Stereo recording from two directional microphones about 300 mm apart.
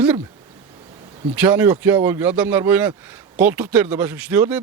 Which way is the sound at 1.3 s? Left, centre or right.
Centre.